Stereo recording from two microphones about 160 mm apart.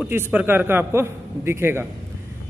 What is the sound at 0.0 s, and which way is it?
A man's voice, 10° right (ahead or behind).